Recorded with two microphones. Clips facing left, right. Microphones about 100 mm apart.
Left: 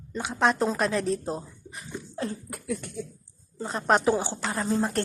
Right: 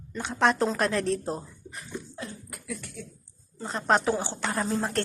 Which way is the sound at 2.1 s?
40° left (ahead or behind).